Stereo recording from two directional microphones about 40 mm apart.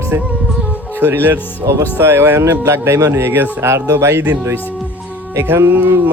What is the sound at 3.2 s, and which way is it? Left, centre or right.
Speech, right.